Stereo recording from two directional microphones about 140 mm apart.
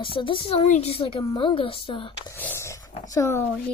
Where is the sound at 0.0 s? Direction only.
40° left (ahead or behind).